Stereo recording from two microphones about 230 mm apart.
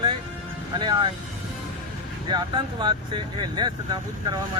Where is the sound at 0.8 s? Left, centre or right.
Right.